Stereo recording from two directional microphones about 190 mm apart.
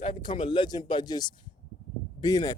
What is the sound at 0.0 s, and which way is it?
Speech, 25° left (ahead or behind).